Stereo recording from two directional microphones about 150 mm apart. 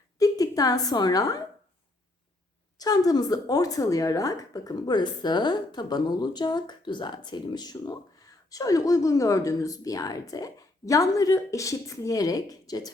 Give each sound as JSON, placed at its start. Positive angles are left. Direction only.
{"t": 0.2, "sound": "a woman's voice", "side_deg": 25}
{"t": 2.7, "sound": "a woman's voice", "side_deg": 25}